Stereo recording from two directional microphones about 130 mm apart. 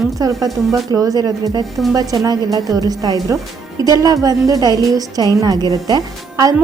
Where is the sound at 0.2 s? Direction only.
25° right (ahead or behind).